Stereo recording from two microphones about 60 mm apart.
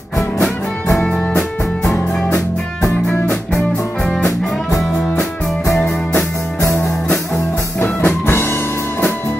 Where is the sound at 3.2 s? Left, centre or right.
Centre.